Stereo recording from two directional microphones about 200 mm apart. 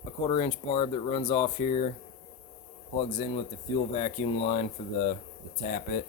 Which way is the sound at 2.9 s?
30° left (ahead or behind).